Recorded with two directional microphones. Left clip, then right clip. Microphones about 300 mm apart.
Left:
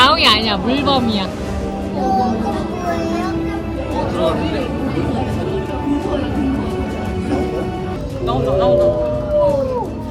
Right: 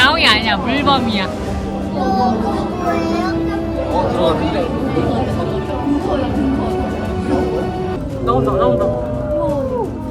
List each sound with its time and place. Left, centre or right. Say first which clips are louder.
0.0 s a sound: even; centre
0.7 s speech: right 1 dB; centre
3.9 s speech: right 2 dB; centre
8.3 s speech: right 1 dB; centre